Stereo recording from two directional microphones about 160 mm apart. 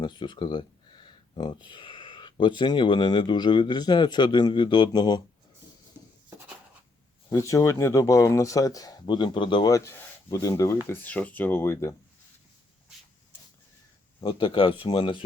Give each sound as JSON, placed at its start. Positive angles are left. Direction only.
{"t": 0.0, "sound": "speech", "side_deg": 30}
{"t": 7.3, "sound": "speech", "side_deg": 20}
{"t": 14.2, "sound": "speech", "side_deg": 30}